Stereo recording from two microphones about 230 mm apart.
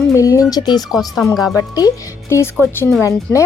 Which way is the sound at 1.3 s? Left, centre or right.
Centre.